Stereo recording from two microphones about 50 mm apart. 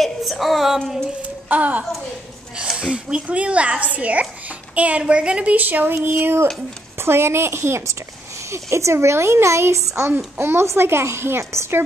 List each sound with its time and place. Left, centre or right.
0.0 s a sound: centre
1.5 s a woman's voice: right
2.8 s a child's voice: centre; by 6.1 s right
7.0 s a child's voice: right